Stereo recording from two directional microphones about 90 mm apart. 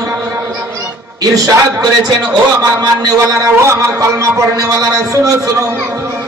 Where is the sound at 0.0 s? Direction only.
30° right (ahead or behind).